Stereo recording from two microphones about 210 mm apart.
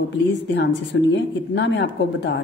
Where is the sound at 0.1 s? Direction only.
55° left (ahead or behind).